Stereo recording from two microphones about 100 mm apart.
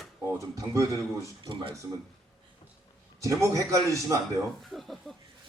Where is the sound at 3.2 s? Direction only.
30° right (ahead or behind).